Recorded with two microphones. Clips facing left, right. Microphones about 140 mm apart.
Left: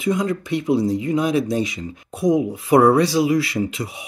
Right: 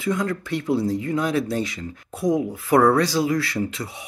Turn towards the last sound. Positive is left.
turn(degrees=15)  # may be behind; listen again after turning